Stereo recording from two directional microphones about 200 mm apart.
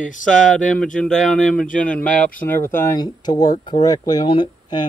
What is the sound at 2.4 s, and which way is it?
Speech, 10° left (ahead or behind).